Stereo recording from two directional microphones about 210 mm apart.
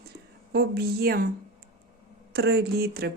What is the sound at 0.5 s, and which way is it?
Speech, 50° right (ahead or behind).